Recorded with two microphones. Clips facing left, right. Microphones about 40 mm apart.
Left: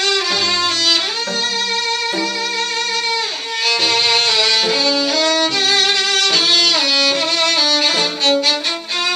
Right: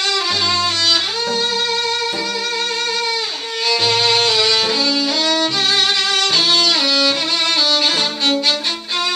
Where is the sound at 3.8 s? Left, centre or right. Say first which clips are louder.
Right 1 dB; centre.